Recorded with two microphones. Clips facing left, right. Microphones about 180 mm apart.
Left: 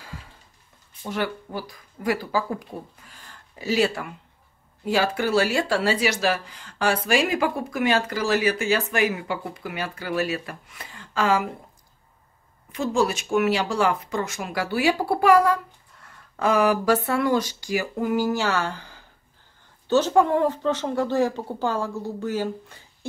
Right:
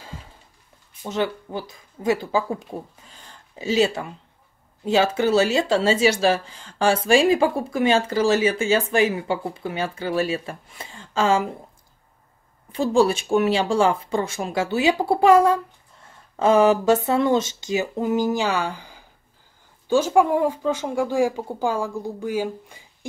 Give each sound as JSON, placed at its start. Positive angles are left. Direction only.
{"t": 1.0, "sound": "speech", "side_deg": -20}
{"t": 12.7, "sound": "speech", "side_deg": -30}